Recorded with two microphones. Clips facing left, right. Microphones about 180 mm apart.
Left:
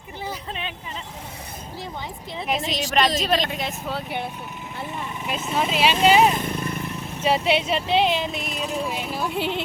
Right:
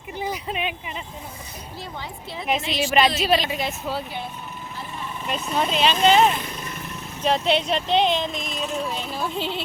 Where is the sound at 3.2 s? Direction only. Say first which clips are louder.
Right 1 dB; 5° right (ahead or behind).